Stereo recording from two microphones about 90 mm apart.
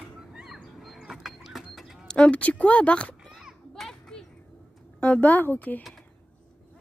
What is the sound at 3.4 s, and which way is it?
Children playing, 5° left (ahead or behind).